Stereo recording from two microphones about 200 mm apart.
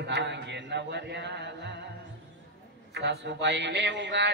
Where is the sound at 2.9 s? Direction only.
55° right (ahead or behind).